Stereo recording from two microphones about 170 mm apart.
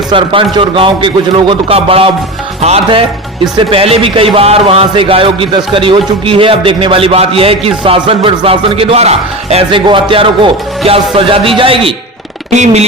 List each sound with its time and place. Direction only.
0.1 s a man's voice: 30° right (ahead or behind)